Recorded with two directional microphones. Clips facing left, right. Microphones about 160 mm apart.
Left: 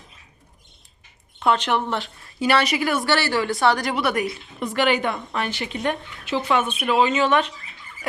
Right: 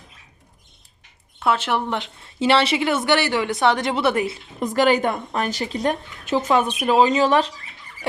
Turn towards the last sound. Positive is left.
turn(degrees=-35)  # may be behind; listen again after turning